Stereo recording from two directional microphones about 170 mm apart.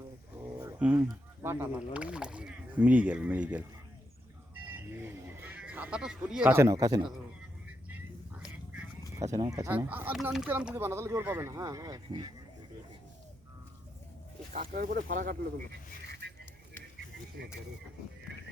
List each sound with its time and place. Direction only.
0.6 s a sound: 10° right (ahead or behind)
1.4 s speech: 15° right (ahead or behind)
4.7 s bird: 15° right (ahead or behind)
8.4 s a sound: 5° right (ahead or behind)
9.4 s speech: 20° right (ahead or behind)
14.6 s speech: 55° right (ahead or behind)